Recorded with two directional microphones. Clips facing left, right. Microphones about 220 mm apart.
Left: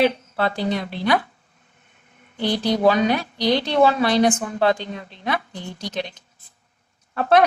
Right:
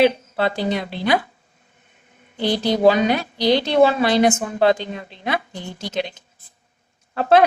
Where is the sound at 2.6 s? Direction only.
25° right (ahead or behind).